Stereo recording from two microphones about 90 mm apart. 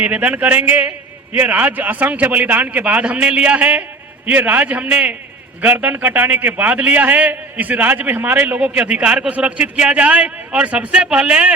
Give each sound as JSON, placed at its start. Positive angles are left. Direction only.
{"t": 0.0, "sound": "a man's voice", "side_deg": -15}